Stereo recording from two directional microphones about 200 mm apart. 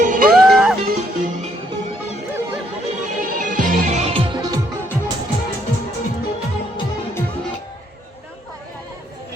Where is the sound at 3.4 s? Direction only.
40° right (ahead or behind); by 4.6 s 25° right (ahead or behind).